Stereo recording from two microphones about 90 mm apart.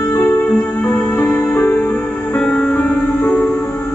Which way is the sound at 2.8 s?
20° left (ahead or behind).